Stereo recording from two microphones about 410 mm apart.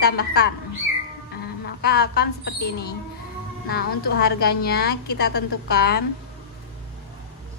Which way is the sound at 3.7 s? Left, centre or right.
Left.